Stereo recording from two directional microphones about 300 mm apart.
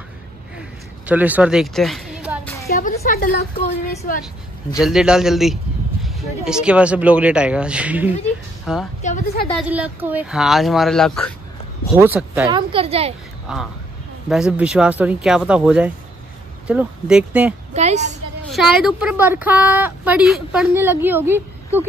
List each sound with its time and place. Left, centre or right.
1.0 s a sound: centre
2.7 s a woman's voice: left
4.7 s a woman's voice: centre
9.0 s a woman's voice: left
9.6 s a woman's voice: centre
12.5 s a woman's voice: centre
13.5 s a woman's voice: centre
17.7 s a woman's voice: right
18.5 s a woman's voice: centre